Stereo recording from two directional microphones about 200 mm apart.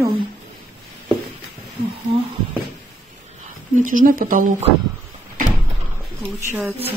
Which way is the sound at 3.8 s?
40° right (ahead or behind).